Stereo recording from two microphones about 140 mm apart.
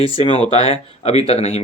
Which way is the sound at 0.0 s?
45° left (ahead or behind).